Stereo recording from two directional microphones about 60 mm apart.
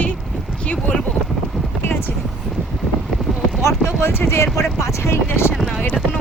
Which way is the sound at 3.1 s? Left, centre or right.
Centre.